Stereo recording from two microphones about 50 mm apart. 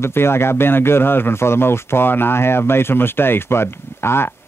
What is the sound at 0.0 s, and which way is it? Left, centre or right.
Speech, left.